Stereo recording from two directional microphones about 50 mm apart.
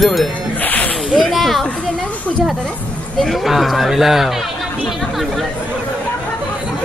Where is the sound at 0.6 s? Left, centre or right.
Left.